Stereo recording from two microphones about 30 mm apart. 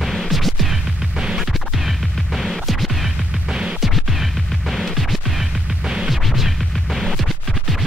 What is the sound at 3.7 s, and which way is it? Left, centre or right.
Music, centre.